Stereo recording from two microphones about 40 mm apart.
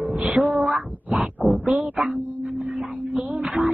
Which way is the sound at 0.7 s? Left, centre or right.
Centre.